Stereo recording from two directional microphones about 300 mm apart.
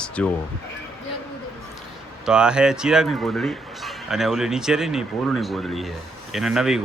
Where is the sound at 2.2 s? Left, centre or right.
Centre.